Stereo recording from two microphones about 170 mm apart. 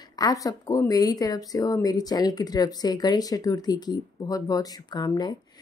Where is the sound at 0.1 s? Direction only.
20° left (ahead or behind).